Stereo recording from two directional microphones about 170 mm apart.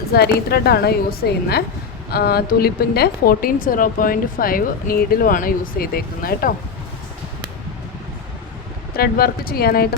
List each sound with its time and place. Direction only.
0.1 s a woman's voice: 70° left (ahead or behind)
9.0 s speech: 60° left (ahead or behind)